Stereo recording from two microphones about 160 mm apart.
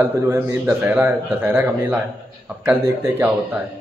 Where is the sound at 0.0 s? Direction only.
15° right (ahead or behind).